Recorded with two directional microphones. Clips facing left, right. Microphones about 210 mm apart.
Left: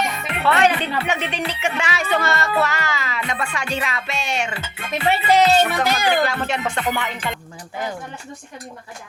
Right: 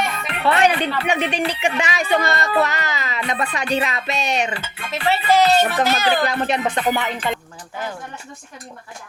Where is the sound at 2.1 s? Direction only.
15° right (ahead or behind).